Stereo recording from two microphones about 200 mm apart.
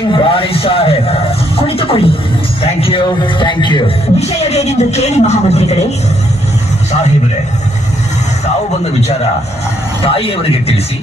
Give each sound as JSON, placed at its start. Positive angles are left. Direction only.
{"t": 0.1, "sound": "a man's voice", "side_deg": 25}
{"t": 10.0, "sound": "a man's voice", "side_deg": 30}